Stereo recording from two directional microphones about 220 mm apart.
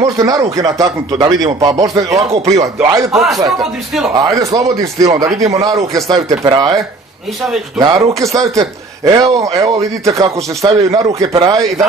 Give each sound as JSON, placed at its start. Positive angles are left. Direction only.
{"t": 0.0, "sound": "speech", "side_deg": -15}
{"t": 2.4, "sound": "a man's voice", "side_deg": -30}
{"t": 2.8, "sound": "speech", "side_deg": -15}
{"t": 3.1, "sound": "speech", "side_deg": 0}
{"t": 4.1, "sound": "speech", "side_deg": -15}
{"t": 8.2, "sound": "a man's voice", "side_deg": -15}